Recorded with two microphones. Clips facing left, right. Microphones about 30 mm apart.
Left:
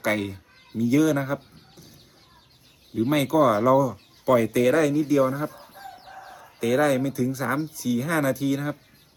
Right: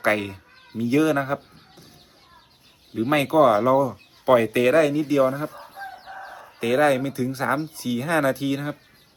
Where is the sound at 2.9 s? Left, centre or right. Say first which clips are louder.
Right 2 dB; right.